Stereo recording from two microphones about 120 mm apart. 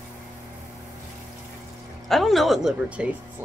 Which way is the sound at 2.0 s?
Centre (ahead or behind).